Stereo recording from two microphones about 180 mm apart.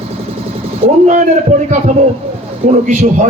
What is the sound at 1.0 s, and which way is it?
Speech, 40° right (ahead or behind).